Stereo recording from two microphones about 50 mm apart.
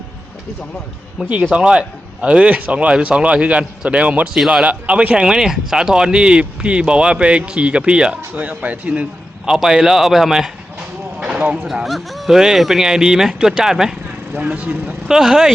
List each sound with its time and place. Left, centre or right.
1.2 s speech: centre
4.4 s speech: centre
4.6 s speech: right
8.3 s speech: right
9.5 s speech: centre
11.2 s clip-clop: right
11.9 s speech: centre
14.3 s speech: right
15.0 s speech: centre